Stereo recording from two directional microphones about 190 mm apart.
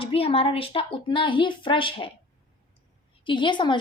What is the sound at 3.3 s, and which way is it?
Speech, 25° left (ahead or behind).